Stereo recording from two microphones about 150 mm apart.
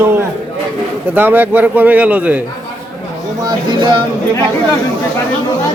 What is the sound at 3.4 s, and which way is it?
Speech, 25° right (ahead or behind).